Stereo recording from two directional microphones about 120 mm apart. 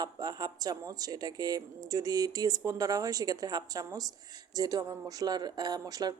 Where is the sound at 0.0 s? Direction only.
35° right (ahead or behind).